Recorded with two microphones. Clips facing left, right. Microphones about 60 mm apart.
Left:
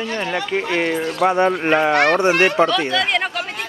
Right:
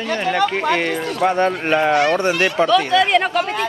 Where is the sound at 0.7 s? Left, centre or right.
Centre.